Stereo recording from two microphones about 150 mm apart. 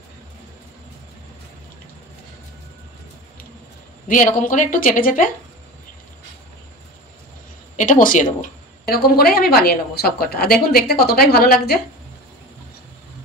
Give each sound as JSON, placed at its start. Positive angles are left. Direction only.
{"t": 4.1, "sound": "a woman's voice", "side_deg": 60}
{"t": 7.7, "sound": "speech", "side_deg": 60}